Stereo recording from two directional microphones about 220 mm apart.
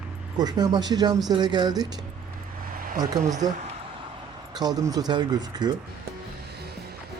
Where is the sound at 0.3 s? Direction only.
20° right (ahead or behind).